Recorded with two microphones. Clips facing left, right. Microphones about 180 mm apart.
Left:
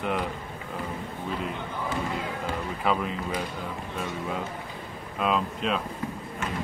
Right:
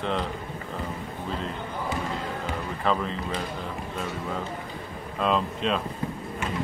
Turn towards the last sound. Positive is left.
turn(degrees=5)  # may be behind; listen again after turning